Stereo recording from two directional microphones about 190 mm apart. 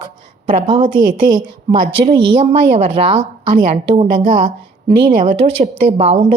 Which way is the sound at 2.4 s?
35° right (ahead or behind).